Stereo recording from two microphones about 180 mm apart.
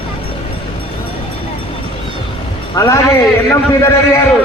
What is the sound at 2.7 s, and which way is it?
A man's voice, 20° left (ahead or behind).